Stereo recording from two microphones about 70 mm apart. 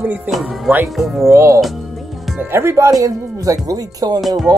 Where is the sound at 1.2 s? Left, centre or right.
Right.